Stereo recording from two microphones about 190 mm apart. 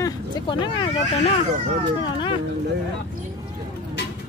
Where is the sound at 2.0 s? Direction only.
25° left (ahead or behind).